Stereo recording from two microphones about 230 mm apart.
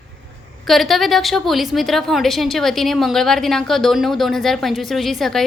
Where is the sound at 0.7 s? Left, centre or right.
Centre.